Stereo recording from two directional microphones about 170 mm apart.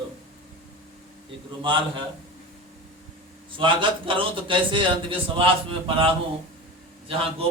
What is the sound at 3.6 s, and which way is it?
A man's voice, 30° right (ahead or behind).